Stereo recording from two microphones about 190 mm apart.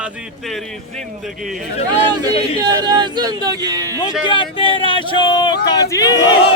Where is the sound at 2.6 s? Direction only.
25° right (ahead or behind).